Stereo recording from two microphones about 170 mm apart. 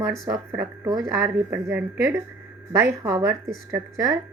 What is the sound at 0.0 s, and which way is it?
A woman's voice, 10° right (ahead or behind).